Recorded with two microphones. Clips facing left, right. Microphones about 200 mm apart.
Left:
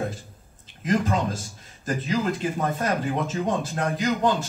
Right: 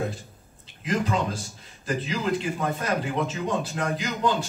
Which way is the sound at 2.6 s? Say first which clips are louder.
Left 2 dB; 45° left (ahead or behind).